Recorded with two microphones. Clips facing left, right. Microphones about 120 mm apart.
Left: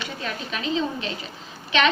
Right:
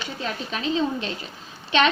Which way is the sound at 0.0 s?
35° right (ahead or behind).